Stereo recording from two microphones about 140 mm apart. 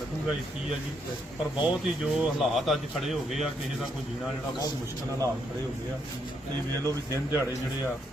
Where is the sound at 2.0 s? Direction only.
5° right (ahead or behind).